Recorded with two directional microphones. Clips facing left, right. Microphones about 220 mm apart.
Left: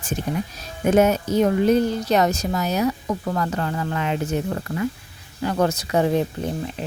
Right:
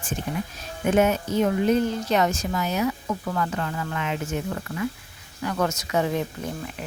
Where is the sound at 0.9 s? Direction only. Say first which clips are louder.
Left 4 dB; 40° left (ahead or behind).